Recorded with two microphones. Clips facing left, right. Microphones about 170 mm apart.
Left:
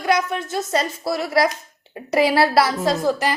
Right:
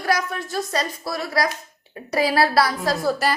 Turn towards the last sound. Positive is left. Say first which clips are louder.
# left 2 dB
turn(degrees=15)  # may be behind; listen again after turning